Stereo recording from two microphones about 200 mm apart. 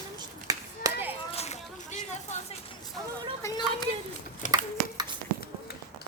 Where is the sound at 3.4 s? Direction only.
15° left (ahead or behind).